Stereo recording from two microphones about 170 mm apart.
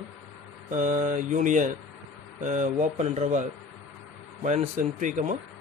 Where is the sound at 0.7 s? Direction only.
50° right (ahead or behind).